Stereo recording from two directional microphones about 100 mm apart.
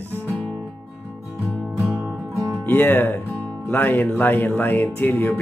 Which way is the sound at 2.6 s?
20° left (ahead or behind).